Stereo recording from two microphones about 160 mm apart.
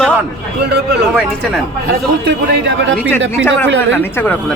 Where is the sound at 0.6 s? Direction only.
90° right.